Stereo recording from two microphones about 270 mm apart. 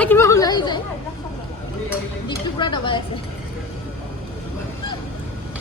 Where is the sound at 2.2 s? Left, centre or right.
Centre.